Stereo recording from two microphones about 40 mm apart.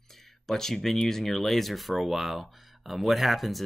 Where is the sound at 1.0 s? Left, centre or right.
Centre.